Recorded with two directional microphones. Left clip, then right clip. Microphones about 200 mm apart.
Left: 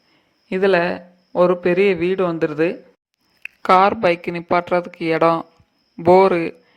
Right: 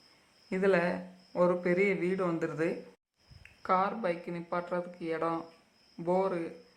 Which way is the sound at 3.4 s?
50° left (ahead or behind).